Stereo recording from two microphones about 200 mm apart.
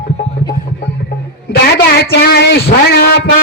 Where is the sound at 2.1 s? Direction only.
55° left (ahead or behind).